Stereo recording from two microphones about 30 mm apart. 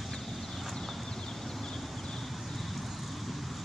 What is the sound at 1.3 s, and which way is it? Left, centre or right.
Horse, centre.